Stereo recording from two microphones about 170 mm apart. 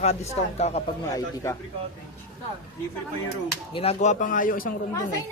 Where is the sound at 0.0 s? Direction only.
40° left (ahead or behind).